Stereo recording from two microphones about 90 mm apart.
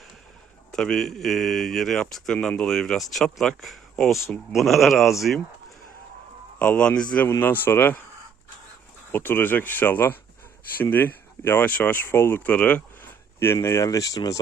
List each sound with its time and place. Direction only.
0.7 s speech: 5° left (ahead or behind)
6.6 s speech: 15° left (ahead or behind)
7.3 s speech: 20° left (ahead or behind)
9.1 s speech: 20° left (ahead or behind)
13.4 s speech: 30° left (ahead or behind)